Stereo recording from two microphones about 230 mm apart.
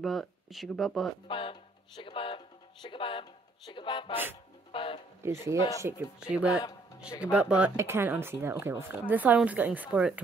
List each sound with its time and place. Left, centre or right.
0.0 s speech: centre
1.2 s speech: left
5.2 s speech: centre